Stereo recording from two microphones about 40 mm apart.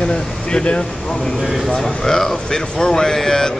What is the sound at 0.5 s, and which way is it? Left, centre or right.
Speech, left.